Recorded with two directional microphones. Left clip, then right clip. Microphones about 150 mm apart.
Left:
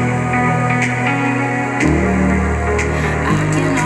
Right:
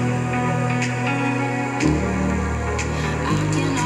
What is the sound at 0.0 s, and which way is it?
Music, 35° left (ahead or behind).